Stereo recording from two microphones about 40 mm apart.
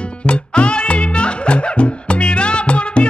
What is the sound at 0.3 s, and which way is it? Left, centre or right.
Music, left.